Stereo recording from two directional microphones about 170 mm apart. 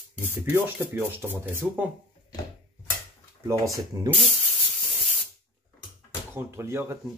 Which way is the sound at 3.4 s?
20° right (ahead or behind).